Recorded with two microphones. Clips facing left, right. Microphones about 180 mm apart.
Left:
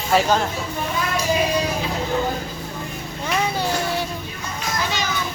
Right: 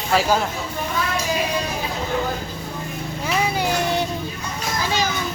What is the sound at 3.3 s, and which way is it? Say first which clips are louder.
Music: right 1 dB; 10° right (ahead or behind).